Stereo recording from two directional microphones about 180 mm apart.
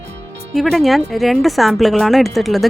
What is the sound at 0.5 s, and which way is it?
Speech, centre (ahead or behind).